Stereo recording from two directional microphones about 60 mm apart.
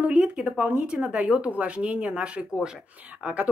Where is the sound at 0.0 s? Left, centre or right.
Right.